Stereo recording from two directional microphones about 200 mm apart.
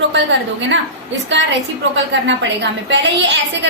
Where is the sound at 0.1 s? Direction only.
65° right (ahead or behind).